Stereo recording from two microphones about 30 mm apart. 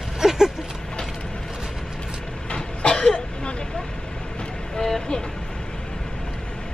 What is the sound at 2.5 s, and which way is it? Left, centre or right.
Vehicle, left.